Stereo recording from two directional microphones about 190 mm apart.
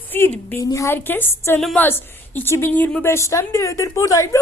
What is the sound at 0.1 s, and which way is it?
A woman's voice, 10° left (ahead or behind).